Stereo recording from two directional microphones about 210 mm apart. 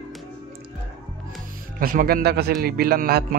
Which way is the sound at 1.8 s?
45° right (ahead or behind).